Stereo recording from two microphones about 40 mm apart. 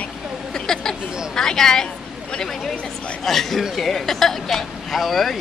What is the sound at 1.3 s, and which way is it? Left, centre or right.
Speech, centre.